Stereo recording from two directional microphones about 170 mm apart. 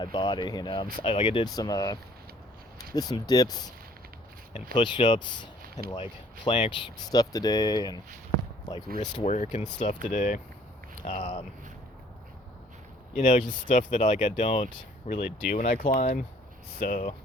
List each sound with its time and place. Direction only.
0.0 s speech: 25° left (ahead or behind)
4.7 s speech: 30° left (ahead or behind)
9.2 s speech: 40° left (ahead or behind)
9.6 s speech: 25° left (ahead or behind)
10.1 s speech: 45° left (ahead or behind)
13.1 s speech: 45° left (ahead or behind)